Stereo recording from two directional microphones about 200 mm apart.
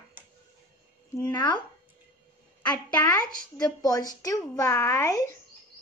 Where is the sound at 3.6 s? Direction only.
20° left (ahead or behind).